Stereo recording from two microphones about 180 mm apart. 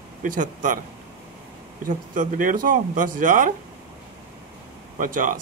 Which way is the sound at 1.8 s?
45° right (ahead or behind).